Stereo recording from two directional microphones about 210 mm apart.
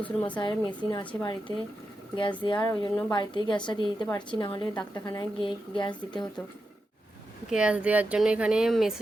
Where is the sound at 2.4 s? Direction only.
20° left (ahead or behind).